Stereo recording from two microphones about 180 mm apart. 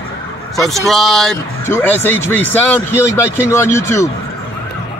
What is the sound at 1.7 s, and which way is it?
Speech, 10° left (ahead or behind).